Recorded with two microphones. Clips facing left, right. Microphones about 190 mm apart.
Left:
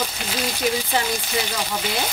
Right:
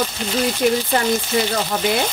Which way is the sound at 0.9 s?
55° right (ahead or behind).